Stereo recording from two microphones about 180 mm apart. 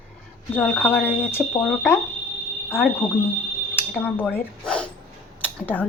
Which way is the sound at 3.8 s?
10° left (ahead or behind).